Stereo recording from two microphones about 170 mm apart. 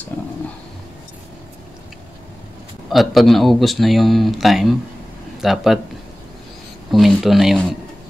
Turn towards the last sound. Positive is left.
turn(degrees=0)  # may be behind; listen again after turning